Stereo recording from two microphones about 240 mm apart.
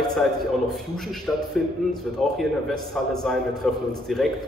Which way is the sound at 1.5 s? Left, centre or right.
Centre.